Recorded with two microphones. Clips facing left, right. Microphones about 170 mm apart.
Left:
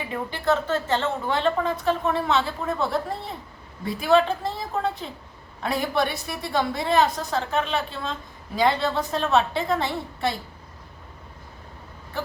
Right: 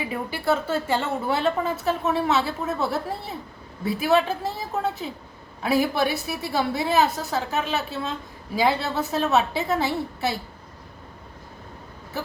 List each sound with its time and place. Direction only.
0.0 s a woman's voice: 10° right (ahead or behind)